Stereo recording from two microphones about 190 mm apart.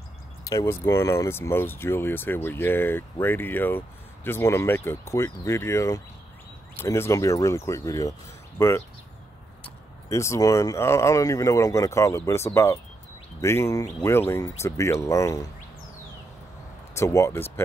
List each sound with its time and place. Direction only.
0.5 s speech: 15° left (ahead or behind)
10.0 s speech: 15° left (ahead or behind)
16.9 s speech: 15° left (ahead or behind)